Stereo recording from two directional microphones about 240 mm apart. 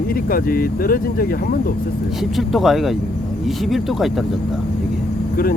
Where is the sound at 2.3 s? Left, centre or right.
Centre.